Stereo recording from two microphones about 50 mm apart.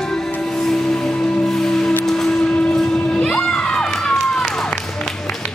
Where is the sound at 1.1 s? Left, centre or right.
Left.